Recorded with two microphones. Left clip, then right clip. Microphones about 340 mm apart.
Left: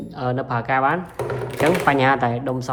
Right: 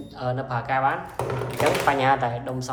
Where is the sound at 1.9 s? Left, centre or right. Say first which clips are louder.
Left 3 dB; left.